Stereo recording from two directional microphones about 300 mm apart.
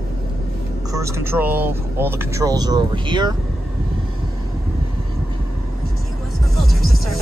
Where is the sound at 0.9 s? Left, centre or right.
Centre.